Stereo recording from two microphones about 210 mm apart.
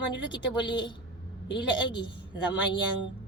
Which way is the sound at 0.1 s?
20° left (ahead or behind).